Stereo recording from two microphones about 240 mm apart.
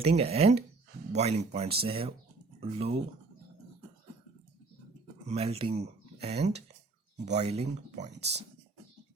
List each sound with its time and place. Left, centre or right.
0.0 s speech: right
5.3 s speech: right